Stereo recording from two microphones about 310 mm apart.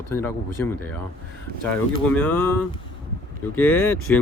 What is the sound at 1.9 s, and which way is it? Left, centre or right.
Speech, centre.